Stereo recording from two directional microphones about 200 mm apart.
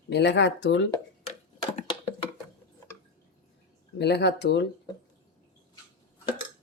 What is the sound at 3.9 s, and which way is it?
Speech, 55° left (ahead or behind).